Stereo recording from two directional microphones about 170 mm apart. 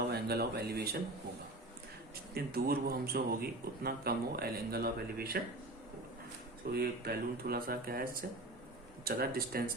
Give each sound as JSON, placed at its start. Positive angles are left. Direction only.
{"t": 0.1, "sound": "speech", "side_deg": -70}
{"t": 2.3, "sound": "a man's voice", "side_deg": -65}
{"t": 6.7, "sound": "a man's voice", "side_deg": -65}